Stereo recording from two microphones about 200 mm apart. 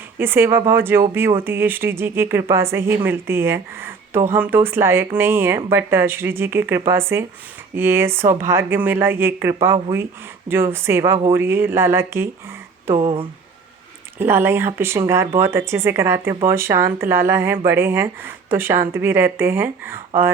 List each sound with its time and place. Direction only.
0.2 s speech: 10° right (ahead or behind)
12.9 s speech: 30° right (ahead or behind)
14.2 s speech: 10° right (ahead or behind)